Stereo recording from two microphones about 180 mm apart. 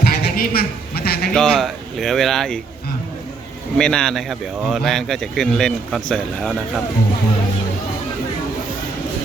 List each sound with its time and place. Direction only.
0.0 s a sound: 60° left (ahead or behind)
1.3 s a man's voice: 5° left (ahead or behind)
3.8 s a man's voice: 5° left (ahead or behind)